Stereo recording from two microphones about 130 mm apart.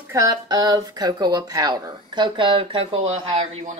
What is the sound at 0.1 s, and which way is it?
Speech, 30° right (ahead or behind).